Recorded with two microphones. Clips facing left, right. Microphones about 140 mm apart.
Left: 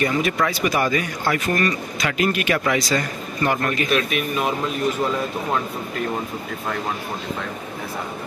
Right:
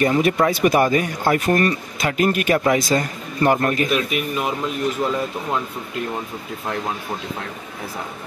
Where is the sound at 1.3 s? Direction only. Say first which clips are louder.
Right 4 dB; 45° right (ahead or behind).